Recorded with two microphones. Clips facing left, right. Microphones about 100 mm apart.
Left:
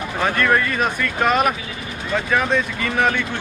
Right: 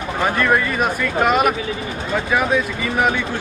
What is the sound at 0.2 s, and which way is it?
Speech, 10° right (ahead or behind).